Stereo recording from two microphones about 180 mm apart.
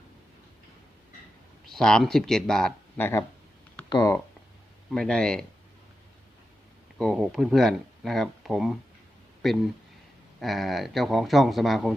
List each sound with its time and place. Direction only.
1.6 s speech: centre (ahead or behind)
3.8 s speech: 25° left (ahead or behind)
4.9 s speech: 5° left (ahead or behind)
7.0 s speech: centre (ahead or behind)